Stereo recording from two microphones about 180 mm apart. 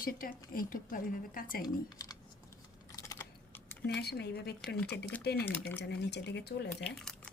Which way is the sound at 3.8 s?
65° left (ahead or behind).